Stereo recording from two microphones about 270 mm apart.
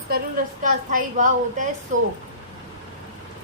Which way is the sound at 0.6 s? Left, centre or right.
Right.